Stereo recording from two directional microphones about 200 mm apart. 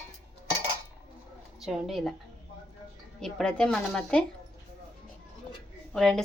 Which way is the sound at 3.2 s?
5° left (ahead or behind).